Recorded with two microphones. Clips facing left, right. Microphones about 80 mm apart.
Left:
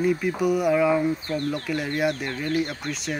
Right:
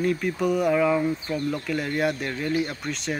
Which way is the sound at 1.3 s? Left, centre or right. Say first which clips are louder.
Even; centre.